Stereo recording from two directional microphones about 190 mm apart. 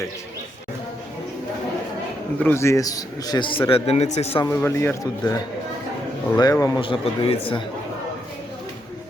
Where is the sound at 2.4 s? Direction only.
15° left (ahead or behind); by 4.4 s 35° left (ahead or behind).